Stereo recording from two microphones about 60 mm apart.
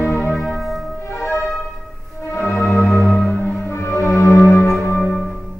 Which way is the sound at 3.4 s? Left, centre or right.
Left.